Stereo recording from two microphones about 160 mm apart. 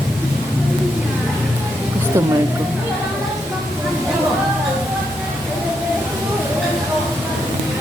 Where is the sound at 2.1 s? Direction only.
15° right (ahead or behind).